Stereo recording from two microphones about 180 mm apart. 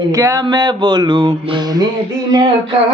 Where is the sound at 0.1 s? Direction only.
15° right (ahead or behind).